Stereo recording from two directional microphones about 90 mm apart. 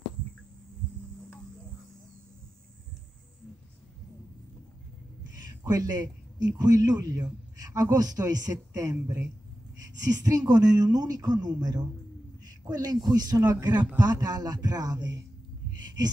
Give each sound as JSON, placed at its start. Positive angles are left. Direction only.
{"t": 5.4, "sound": "a man's voice", "side_deg": -45}
{"t": 10.2, "sound": "speech", "side_deg": -45}